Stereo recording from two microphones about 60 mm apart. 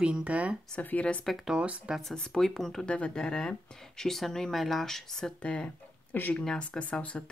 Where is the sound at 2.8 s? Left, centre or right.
Centre.